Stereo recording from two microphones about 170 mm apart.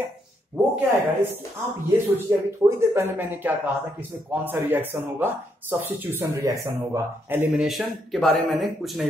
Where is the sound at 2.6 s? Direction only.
15° right (ahead or behind).